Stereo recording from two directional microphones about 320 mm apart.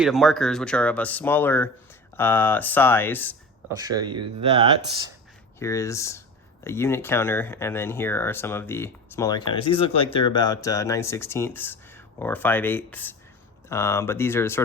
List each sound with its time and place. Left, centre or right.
0.0 s speech: centre
3.7 s speech: centre
5.5 s speech: centre